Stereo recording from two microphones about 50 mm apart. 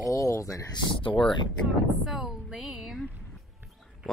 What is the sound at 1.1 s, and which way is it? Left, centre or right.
Speech, centre.